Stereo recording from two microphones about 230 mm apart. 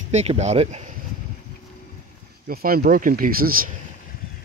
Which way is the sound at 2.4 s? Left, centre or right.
Right.